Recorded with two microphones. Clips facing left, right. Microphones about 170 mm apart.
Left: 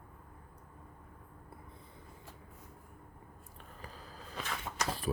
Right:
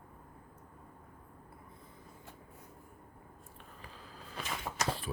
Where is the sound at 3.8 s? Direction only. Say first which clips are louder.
Left 3 dB; 40° left (ahead or behind).